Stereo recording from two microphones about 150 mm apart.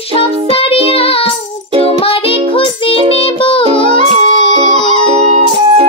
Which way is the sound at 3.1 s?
35° left (ahead or behind).